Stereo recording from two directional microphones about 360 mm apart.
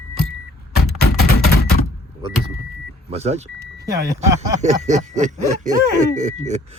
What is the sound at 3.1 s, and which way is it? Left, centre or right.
Speech, centre.